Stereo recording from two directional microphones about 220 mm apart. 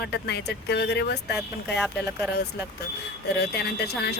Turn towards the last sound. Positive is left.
turn(degrees=50)  # may be behind; listen again after turning